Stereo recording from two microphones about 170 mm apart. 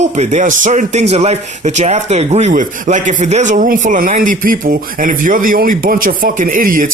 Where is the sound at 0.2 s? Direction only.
45° right (ahead or behind).